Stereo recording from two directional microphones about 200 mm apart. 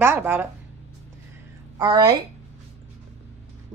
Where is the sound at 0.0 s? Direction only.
10° right (ahead or behind).